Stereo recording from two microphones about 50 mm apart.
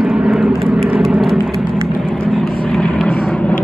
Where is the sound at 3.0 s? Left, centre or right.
Centre.